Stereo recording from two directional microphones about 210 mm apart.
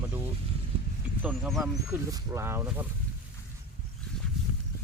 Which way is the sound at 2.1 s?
15° right (ahead or behind).